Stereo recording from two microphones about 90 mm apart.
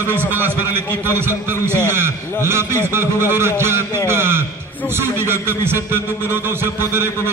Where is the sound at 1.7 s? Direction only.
30° right (ahead or behind).